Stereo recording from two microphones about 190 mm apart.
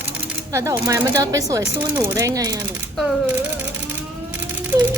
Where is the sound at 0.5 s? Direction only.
15° right (ahead or behind).